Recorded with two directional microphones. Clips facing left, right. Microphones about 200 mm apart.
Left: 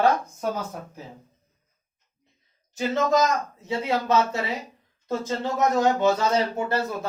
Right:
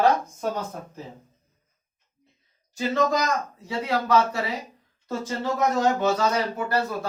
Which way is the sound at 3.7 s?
25° left (ahead or behind).